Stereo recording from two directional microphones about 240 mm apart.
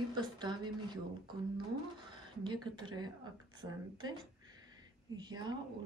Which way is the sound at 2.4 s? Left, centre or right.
Centre.